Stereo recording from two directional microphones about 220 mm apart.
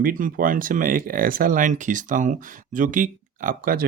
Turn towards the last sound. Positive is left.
turn(degrees=-40)  # may be behind; listen again after turning